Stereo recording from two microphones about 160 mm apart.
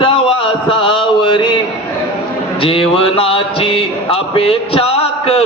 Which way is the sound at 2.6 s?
35° left (ahead or behind).